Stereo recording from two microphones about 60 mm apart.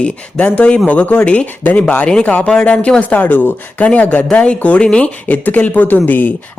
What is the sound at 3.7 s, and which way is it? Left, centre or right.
Speech, left.